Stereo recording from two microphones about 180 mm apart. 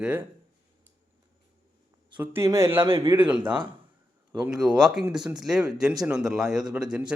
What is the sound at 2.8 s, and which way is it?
Speech, 25° right (ahead or behind).